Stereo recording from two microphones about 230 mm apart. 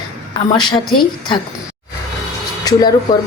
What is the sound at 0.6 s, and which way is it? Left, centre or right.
Speech, centre.